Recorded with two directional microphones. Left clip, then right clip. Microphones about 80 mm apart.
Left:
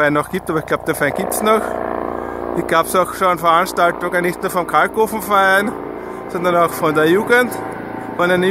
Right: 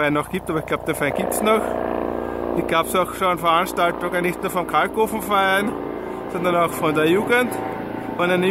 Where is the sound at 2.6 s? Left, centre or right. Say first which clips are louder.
Left 6 dB; left.